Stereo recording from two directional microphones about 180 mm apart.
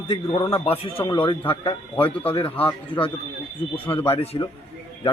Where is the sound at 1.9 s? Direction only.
10° left (ahead or behind).